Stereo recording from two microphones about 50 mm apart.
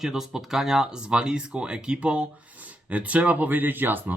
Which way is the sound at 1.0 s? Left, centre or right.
Centre.